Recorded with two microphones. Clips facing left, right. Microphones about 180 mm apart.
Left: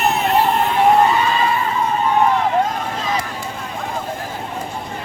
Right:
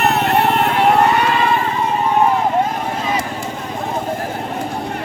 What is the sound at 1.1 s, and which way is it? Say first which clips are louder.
Vehicle: right 2 dB; 65° right (ahead or behind).